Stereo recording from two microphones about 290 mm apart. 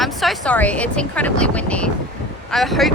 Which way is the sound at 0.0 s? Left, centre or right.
Centre.